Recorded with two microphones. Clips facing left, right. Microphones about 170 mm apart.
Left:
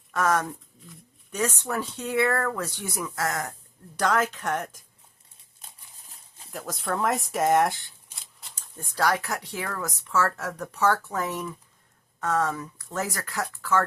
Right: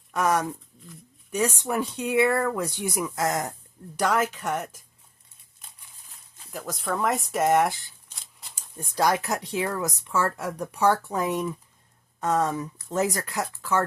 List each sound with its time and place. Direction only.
0.1 s speech: 15° right (ahead or behind)
6.5 s speech: centre (ahead or behind)
8.5 s speech: 15° right (ahead or behind)